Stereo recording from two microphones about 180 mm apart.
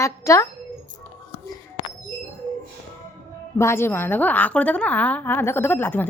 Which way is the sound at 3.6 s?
15° left (ahead or behind).